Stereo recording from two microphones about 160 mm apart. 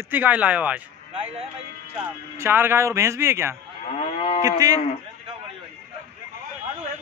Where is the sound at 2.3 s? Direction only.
15° right (ahead or behind).